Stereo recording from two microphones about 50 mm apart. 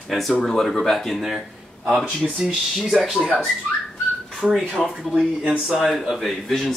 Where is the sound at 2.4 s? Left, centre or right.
Centre.